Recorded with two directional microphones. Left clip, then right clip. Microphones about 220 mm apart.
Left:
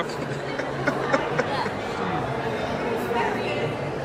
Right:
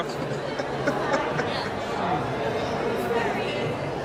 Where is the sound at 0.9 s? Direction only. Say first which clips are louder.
Left 1 dB; 10° right (ahead or behind).